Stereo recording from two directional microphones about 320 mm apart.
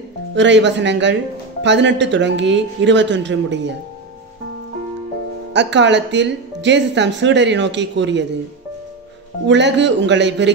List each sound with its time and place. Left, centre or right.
0.3 s speech: right
5.5 s speech: right
9.5 s speech: right